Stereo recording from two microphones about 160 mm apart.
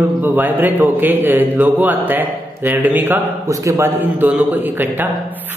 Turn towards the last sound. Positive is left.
turn(degrees=-10)  # may be behind; listen again after turning